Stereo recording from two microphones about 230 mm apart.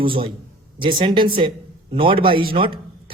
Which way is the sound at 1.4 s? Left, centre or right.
Right.